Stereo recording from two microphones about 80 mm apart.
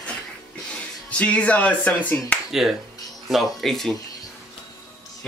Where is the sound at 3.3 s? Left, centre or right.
Centre.